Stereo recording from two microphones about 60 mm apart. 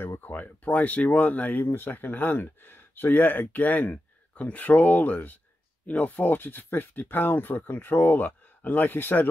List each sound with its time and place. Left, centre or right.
0.0 s a sound: left
0.3 s speech: left
1.6 s speech: left